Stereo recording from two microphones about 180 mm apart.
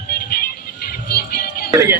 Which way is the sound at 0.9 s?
60° left (ahead or behind).